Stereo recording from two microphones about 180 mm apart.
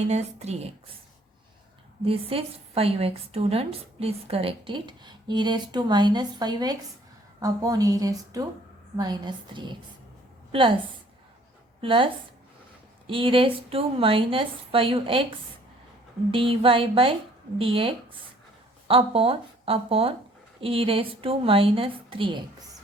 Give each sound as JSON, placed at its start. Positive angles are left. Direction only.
{"t": 0.1, "sound": "a woman's voice", "side_deg": -35}
{"t": 2.0, "sound": "a woman's voice", "side_deg": -30}
{"t": 11.8, "sound": "a woman's voice", "side_deg": -30}
{"t": 16.3, "sound": "a woman's voice", "side_deg": -30}